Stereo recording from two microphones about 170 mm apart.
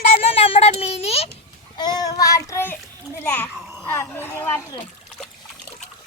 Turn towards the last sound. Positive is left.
turn(degrees=15)  # may be behind; listen again after turning